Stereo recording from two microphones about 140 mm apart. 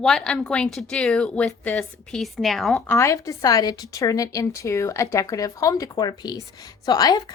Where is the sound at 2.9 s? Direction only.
20° left (ahead or behind).